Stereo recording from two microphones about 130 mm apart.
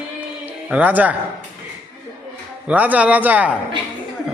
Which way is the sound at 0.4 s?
15° right (ahead or behind).